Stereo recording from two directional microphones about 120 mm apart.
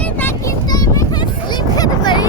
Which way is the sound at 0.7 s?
30° left (ahead or behind).